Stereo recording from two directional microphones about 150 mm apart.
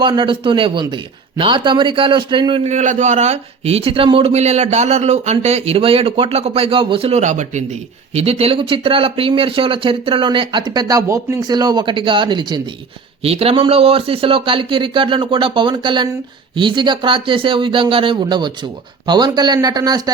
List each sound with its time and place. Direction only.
0.0 s a man's voice: 30° right (ahead or behind)
2.6 s a man's voice: 50° right (ahead or behind); by 12.6 s 30° right (ahead or behind)
13.2 s a man's voice: 40° right (ahead or behind)